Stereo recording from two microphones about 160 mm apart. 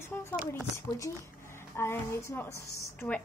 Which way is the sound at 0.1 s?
15° left (ahead or behind).